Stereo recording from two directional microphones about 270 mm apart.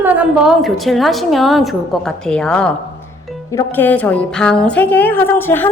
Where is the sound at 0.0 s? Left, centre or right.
Centre.